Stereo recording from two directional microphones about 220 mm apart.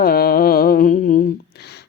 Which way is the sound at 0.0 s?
45° left (ahead or behind).